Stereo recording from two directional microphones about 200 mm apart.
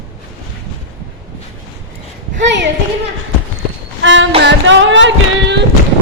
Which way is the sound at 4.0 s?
70° right (ahead or behind).